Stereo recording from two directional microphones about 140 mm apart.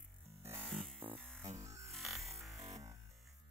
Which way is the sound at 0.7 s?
Centre (ahead or behind).